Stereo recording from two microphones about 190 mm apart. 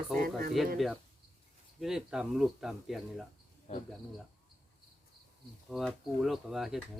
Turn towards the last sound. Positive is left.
turn(degrees=0)  # may be behind; listen again after turning